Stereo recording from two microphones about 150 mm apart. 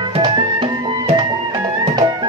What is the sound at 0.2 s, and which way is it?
Music, 30° right (ahead or behind).